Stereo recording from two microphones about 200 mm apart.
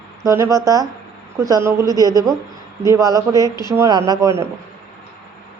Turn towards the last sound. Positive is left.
turn(degrees=-15)  # may be behind; listen again after turning